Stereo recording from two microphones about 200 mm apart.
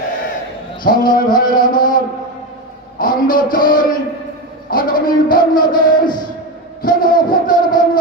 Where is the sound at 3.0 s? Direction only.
45° left (ahead or behind).